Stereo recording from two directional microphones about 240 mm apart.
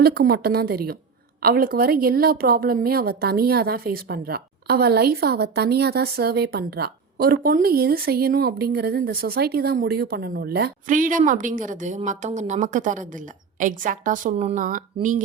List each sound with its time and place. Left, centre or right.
0.0 s a woman's voice: right